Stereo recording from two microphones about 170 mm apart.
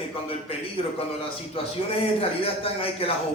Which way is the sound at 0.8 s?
35° left (ahead or behind).